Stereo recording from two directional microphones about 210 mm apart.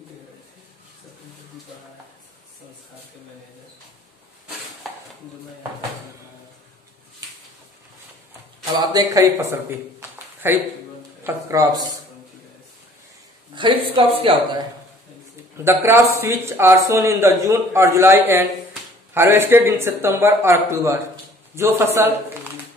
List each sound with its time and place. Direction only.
8.7 s a man's voice: 15° right (ahead or behind)
10.1 s a sound: 10° right (ahead or behind)
11.2 s a man's voice: 15° right (ahead or behind)
13.6 s speech: 25° right (ahead or behind)
15.5 s a man's voice: 10° right (ahead or behind)